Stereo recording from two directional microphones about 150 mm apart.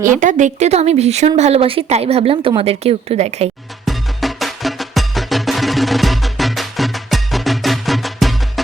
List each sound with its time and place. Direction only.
0.0 s speech: 60° right (ahead or behind)
3.8 s music: centre (ahead or behind)